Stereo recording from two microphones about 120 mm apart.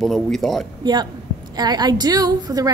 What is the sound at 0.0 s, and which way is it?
Speech, centre (ahead or behind).